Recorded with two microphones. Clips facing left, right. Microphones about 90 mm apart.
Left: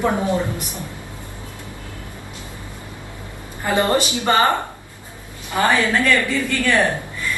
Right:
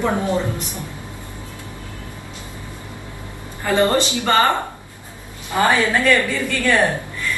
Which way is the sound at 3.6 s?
20° left (ahead or behind).